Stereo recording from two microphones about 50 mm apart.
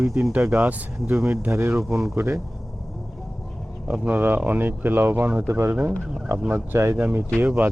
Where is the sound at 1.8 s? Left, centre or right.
Centre.